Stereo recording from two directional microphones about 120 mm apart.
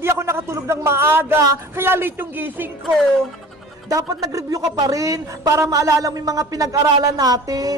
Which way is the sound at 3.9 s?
30° right (ahead or behind).